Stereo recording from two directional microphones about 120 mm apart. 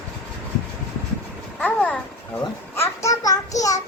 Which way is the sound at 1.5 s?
10° left (ahead or behind).